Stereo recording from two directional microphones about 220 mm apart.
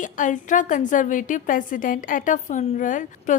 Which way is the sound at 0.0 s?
35° left (ahead or behind).